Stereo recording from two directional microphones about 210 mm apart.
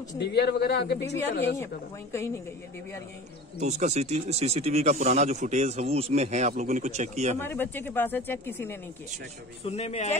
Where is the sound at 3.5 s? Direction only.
35° right (ahead or behind).